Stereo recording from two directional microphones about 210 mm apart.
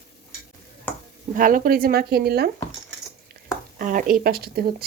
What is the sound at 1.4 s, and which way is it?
Speech, 40° right (ahead or behind).